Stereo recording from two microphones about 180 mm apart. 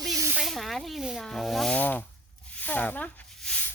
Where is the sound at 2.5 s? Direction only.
10° left (ahead or behind).